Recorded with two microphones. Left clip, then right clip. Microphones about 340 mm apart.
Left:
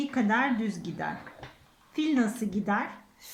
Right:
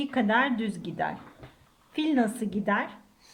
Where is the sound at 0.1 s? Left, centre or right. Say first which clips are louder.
Right 3 dB; right.